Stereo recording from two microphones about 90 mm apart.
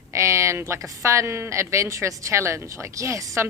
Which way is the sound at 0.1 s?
35° right (ahead or behind).